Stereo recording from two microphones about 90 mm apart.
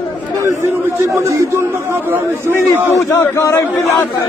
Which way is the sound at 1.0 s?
30° right (ahead or behind).